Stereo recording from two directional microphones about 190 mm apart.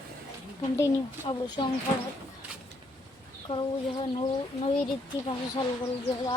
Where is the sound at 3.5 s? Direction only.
30° left (ahead or behind).